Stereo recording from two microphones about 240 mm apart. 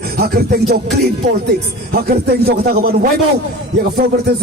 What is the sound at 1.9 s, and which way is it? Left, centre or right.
Speech, right.